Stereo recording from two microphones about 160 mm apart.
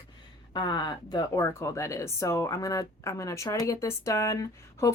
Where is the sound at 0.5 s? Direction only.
25° left (ahead or behind).